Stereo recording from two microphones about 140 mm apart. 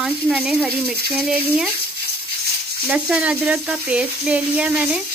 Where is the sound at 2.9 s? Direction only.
10° right (ahead or behind).